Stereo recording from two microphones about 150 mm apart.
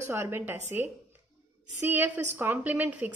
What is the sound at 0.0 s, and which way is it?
A woman's voice, 15° right (ahead or behind).